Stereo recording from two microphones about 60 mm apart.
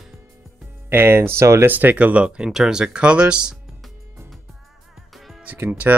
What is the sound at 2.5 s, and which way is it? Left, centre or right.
Speech, centre.